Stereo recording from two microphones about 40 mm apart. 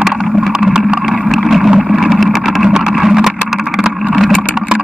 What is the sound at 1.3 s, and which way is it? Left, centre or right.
Boat, centre.